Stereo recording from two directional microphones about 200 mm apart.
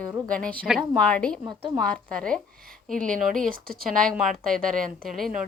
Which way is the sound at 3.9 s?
Centre (ahead or behind).